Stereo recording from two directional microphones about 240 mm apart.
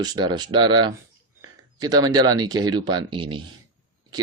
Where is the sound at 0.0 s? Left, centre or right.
Centre.